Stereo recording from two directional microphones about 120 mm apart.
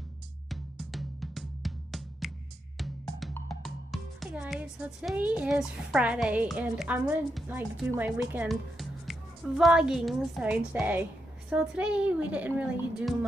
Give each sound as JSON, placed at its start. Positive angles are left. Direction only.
{"t": 0.5, "sound": "music", "side_deg": 0}
{"t": 4.4, "sound": "a woman's voice", "side_deg": -10}
{"t": 8.5, "sound": "a woman's voice", "side_deg": 0}